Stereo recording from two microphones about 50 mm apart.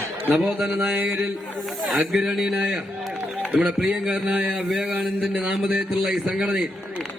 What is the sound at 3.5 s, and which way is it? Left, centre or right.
Speech, right.